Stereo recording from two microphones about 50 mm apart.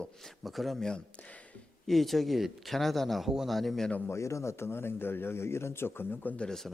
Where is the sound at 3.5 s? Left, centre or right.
Centre.